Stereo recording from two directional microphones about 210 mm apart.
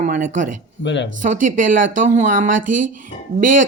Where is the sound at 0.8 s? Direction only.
60° left (ahead or behind).